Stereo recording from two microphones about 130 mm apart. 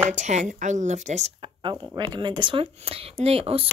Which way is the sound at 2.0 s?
35° right (ahead or behind).